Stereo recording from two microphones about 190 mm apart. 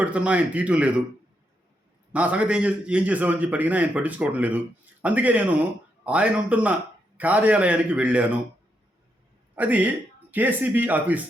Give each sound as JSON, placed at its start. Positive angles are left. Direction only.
{"t": 0.0, "sound": "a man's voice", "side_deg": -5}
{"t": 2.1, "sound": "a man's voice", "side_deg": -5}
{"t": 9.6, "sound": "a man's voice", "side_deg": -10}